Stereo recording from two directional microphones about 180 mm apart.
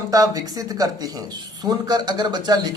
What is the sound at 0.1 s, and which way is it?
Speech, 20° right (ahead or behind).